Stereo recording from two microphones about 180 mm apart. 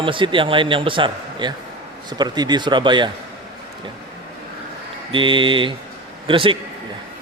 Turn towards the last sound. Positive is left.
turn(degrees=-30)  # may be behind; listen again after turning